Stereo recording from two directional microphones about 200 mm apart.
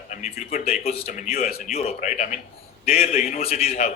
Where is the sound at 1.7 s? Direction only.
35° left (ahead or behind).